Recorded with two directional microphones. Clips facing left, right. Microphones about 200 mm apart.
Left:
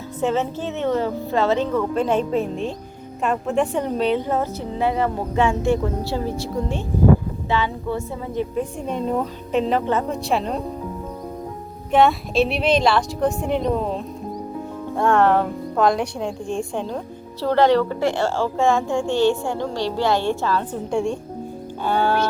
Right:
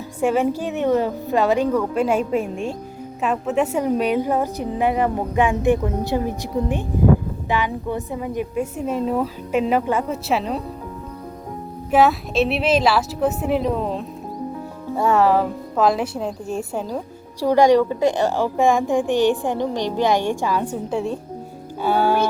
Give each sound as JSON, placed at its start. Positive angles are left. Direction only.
{"t": 0.2, "sound": "a woman's voice", "side_deg": -10}
{"t": 11.9, "sound": "a woman's voice", "side_deg": -5}